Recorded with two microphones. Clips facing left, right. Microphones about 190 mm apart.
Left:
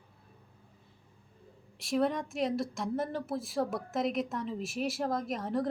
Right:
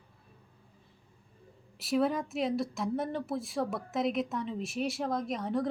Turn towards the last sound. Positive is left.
turn(degrees=0)  # may be behind; listen again after turning